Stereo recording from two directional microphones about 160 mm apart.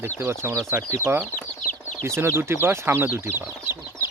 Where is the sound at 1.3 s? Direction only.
55° left (ahead or behind).